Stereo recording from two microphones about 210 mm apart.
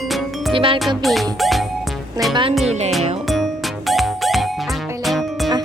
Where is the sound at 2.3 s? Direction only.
25° right (ahead or behind).